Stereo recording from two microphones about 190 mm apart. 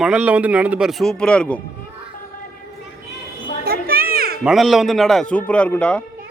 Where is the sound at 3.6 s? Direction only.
50° right (ahead or behind).